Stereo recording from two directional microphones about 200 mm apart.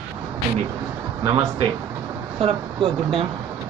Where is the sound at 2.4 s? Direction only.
25° right (ahead or behind).